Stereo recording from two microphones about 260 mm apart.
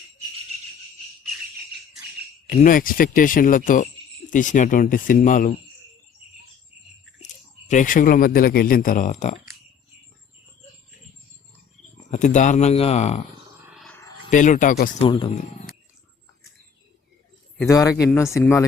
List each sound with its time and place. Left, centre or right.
2.5 s speech: left
7.7 s speech: left
12.1 s speech: left
13.7 s a sound: centre
14.3 s speech: left
15.0 s speech: centre
17.6 s speech: centre